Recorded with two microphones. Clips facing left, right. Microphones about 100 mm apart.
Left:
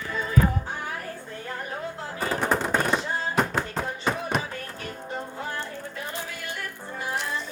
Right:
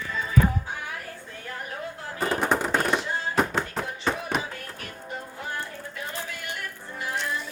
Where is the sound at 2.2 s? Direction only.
Centre (ahead or behind).